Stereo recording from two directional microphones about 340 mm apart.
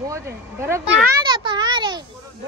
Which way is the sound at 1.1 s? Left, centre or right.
Centre.